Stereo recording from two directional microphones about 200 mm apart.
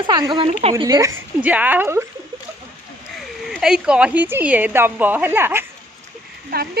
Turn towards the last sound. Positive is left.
turn(degrees=-50)  # may be behind; listen again after turning